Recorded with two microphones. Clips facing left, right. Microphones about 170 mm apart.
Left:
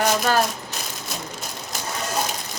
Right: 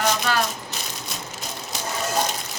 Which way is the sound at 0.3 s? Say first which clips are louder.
Left 5 dB; 45° left (ahead or behind).